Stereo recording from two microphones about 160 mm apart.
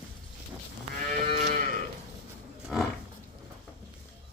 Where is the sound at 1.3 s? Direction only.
50° right (ahead or behind).